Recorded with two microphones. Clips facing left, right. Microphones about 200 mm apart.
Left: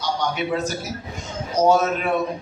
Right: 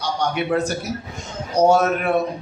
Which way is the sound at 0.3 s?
60° right (ahead or behind).